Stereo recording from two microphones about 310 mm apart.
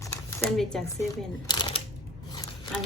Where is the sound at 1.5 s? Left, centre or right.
Centre.